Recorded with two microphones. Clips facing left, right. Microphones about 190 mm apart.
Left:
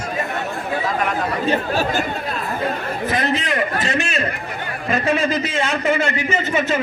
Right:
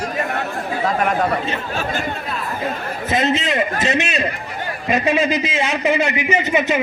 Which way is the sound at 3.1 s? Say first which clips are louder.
Right 3 dB; 25° right (ahead or behind).